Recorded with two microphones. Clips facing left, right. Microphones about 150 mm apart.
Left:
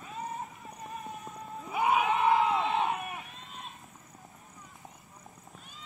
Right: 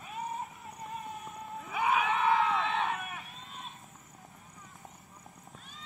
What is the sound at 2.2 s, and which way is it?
Crowd, 15° left (ahead or behind).